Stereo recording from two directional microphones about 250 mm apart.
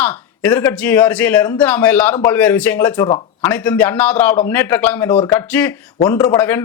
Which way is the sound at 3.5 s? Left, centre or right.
Centre.